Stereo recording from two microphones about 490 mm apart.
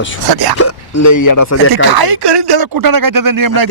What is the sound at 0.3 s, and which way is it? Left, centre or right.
Speech, right.